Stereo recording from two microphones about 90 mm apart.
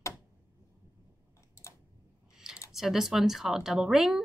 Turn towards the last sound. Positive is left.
turn(degrees=-5)  # may be behind; listen again after turning